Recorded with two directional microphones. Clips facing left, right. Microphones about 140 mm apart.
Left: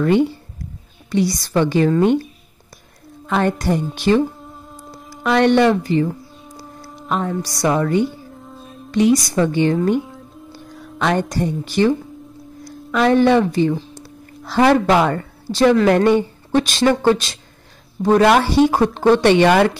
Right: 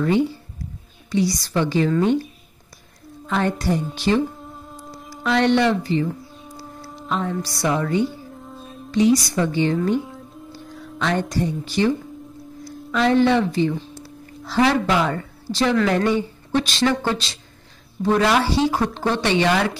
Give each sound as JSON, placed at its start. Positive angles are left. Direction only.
{"t": 1.1, "sound": "a woman's voice", "side_deg": 55}
{"t": 3.3, "sound": "a woman's voice", "side_deg": 50}
{"t": 4.4, "sound": "humming", "side_deg": 0}
{"t": 5.2, "sound": "a woman's voice", "side_deg": 50}
{"t": 7.1, "sound": "a woman's voice", "side_deg": 50}
{"t": 8.4, "sound": "music", "side_deg": 0}
{"t": 8.9, "sound": "a woman's voice", "side_deg": 50}
{"t": 11.0, "sound": "a woman's voice", "side_deg": 50}
{"t": 12.9, "sound": "a woman's voice", "side_deg": 55}